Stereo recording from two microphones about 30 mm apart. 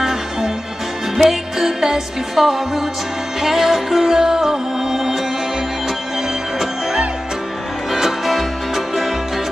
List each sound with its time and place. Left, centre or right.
0.0 s music: centre
8.3 s music: centre